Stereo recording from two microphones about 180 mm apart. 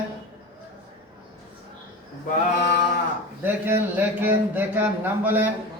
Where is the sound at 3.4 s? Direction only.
10° right (ahead or behind).